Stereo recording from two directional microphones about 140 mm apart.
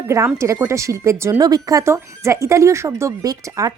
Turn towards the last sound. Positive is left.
turn(degrees=-25)  # may be behind; listen again after turning